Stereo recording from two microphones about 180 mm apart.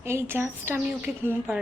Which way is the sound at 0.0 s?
15° right (ahead or behind).